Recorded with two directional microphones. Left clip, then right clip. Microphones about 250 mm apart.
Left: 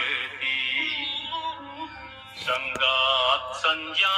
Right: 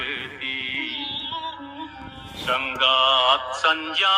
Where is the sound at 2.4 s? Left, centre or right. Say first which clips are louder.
Right 3 dB; right.